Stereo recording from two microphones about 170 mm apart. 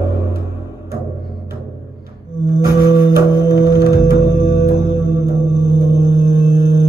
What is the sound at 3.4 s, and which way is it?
Music, 65° left (ahead or behind).